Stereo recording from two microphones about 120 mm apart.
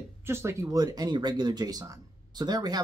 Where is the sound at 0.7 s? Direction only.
30° right (ahead or behind).